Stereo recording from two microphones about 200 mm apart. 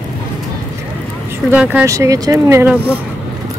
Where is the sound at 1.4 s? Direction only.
10° right (ahead or behind).